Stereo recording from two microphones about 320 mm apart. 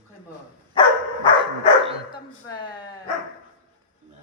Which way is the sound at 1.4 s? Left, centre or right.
Centre.